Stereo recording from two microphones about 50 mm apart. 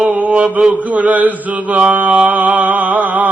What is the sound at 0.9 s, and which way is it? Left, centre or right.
Chant, right.